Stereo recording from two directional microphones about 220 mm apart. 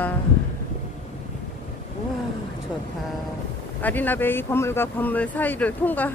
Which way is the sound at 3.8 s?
10° left (ahead or behind).